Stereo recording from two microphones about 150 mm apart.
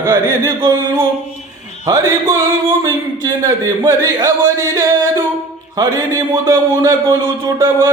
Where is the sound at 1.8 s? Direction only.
20° right (ahead or behind).